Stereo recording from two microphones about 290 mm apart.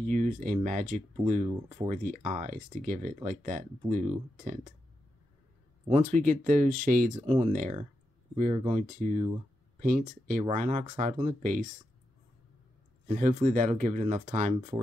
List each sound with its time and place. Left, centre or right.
0.0 s speech: right
5.9 s speech: right
13.0 s speech: right